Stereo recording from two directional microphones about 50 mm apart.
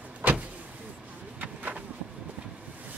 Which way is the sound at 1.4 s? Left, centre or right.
Right.